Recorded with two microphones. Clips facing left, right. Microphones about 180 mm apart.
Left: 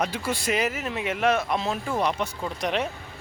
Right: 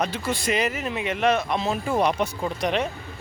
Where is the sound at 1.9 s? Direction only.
15° right (ahead or behind).